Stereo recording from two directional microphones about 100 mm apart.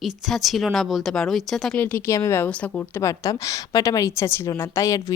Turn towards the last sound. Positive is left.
turn(degrees=30)  # may be behind; listen again after turning